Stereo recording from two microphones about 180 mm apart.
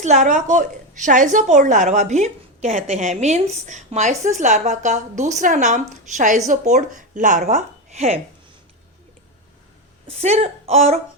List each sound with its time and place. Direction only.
0.0 s a woman's voice: 40° right (ahead or behind)
10.1 s a woman's voice: 35° right (ahead or behind)